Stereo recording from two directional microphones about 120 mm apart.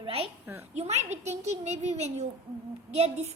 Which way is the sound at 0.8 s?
65° right (ahead or behind).